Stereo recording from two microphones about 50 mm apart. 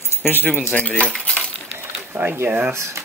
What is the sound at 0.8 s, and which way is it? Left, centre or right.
Cutlery, left.